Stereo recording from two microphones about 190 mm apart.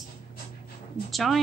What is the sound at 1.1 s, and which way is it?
Speech, centre (ahead or behind).